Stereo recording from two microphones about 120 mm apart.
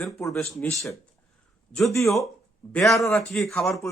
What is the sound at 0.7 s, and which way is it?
Speech, 25° left (ahead or behind).